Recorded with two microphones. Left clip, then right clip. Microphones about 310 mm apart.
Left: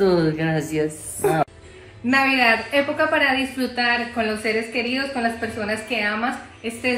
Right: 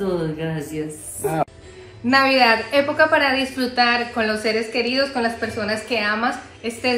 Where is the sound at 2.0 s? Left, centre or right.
Centre.